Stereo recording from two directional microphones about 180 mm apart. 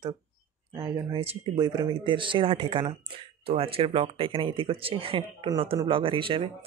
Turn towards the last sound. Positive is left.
turn(degrees=-30)  # may be behind; listen again after turning